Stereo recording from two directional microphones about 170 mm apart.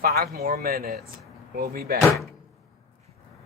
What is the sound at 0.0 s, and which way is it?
Speech, 65° right (ahead or behind).